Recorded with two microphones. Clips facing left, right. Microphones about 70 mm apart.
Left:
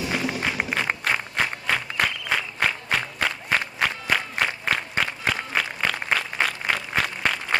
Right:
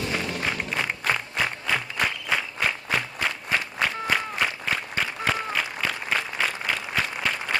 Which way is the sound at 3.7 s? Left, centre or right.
Left.